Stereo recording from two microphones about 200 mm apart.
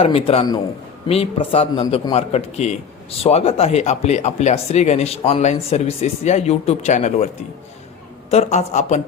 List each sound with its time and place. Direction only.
0.0 s a man's voice: 25° left (ahead or behind)
8.3 s a man's voice: 35° left (ahead or behind)